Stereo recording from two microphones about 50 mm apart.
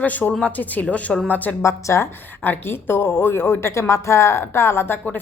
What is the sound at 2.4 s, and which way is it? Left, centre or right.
A woman's voice, left.